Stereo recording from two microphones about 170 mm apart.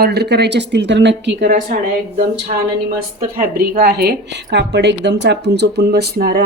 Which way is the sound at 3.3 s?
60° right (ahead or behind).